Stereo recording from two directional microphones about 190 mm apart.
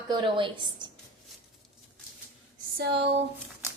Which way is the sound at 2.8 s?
60° right (ahead or behind).